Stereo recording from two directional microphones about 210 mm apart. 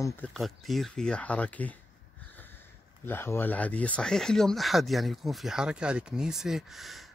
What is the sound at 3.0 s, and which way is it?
Speech, 10° left (ahead or behind).